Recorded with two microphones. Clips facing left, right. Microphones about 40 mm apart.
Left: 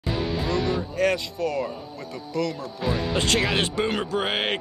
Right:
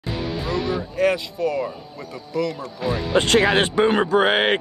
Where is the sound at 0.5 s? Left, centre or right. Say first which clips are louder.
Right 3 dB; centre.